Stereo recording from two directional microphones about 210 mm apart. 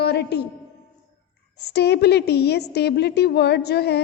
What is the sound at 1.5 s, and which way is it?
A woman's voice, 50° left (ahead or behind).